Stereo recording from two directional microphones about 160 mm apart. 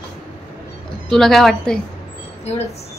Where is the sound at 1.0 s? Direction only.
5° left (ahead or behind).